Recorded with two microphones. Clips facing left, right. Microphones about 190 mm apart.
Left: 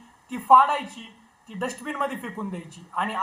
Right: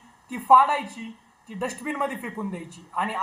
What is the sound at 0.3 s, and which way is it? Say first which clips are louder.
Speech: even; 5° right (ahead or behind).